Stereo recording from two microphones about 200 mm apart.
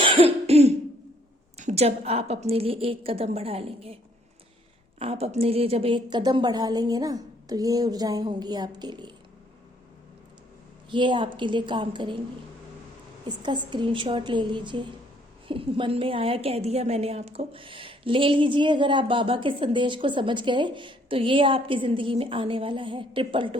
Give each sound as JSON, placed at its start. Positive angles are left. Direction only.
{"t": 0.0, "sound": "cough", "side_deg": -25}
{"t": 1.5, "sound": "a woman's voice", "side_deg": -35}
{"t": 4.9, "sound": "a woman's voice", "side_deg": -30}
{"t": 10.8, "sound": "a woman's voice", "side_deg": -25}
{"t": 13.2, "sound": "a woman's voice", "side_deg": -25}